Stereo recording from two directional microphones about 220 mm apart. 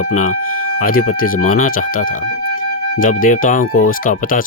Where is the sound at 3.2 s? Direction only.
35° left (ahead or behind).